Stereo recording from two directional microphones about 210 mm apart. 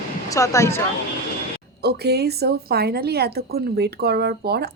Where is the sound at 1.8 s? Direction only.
50° right (ahead or behind).